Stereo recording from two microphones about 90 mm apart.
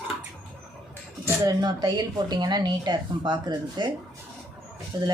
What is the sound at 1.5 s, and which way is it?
A woman's voice, 50° right (ahead or behind).